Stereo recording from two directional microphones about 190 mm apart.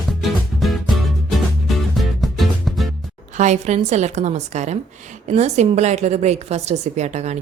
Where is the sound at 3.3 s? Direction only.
40° right (ahead or behind).